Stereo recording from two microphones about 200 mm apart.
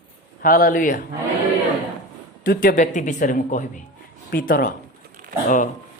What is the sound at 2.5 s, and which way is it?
A man's voice, 45° left (ahead or behind).